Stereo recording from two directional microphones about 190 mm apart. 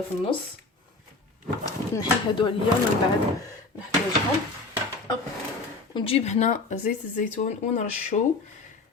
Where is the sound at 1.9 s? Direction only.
25° left (ahead or behind).